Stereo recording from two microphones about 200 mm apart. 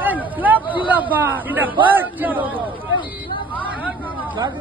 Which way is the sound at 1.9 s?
10° right (ahead or behind).